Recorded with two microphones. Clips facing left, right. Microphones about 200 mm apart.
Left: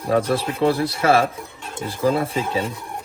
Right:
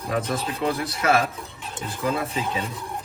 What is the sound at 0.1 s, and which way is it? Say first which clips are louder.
Speech: left 7 dB; 30° left (ahead or behind).